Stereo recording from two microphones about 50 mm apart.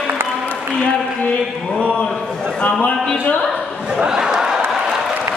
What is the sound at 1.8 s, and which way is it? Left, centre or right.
A man's voice, left.